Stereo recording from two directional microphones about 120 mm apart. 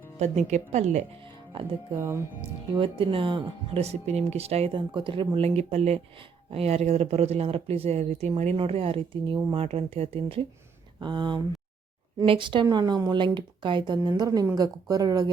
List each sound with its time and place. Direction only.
0.2 s speech: 75° right (ahead or behind)
1.2 s speech: 45° right (ahead or behind)
2.0 s speech: 25° right (ahead or behind)
2.7 s speech: 45° right (ahead or behind)
3.8 s speech: 60° right (ahead or behind); by 5.5 s 45° right (ahead or behind)
5.5 s speech: 65° right (ahead or behind); by 9.6 s 45° right (ahead or behind)
9.6 s speech: 60° right (ahead or behind)
11.0 s speech: 40° right (ahead or behind)